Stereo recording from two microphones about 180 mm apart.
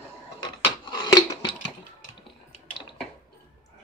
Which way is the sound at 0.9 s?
25° left (ahead or behind).